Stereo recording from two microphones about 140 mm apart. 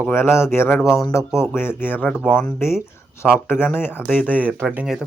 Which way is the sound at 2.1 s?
5° right (ahead or behind).